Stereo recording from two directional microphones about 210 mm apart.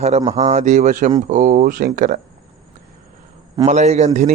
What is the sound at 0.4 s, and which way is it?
A man's voice, 35° right (ahead or behind).